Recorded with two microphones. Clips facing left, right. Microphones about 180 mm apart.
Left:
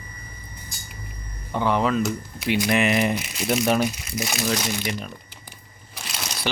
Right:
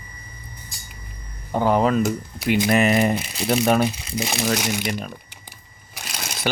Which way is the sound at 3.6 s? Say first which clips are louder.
Right 3 dB; 55° right (ahead or behind).